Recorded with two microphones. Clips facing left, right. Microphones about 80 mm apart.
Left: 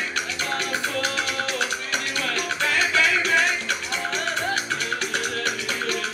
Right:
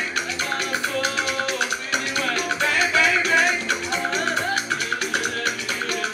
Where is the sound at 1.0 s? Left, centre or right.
Centre.